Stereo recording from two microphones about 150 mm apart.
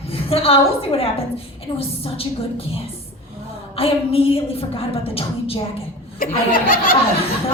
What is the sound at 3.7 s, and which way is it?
A woman's voice, 40° left (ahead or behind).